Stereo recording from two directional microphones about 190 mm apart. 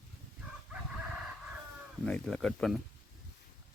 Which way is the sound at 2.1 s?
5° left (ahead or behind).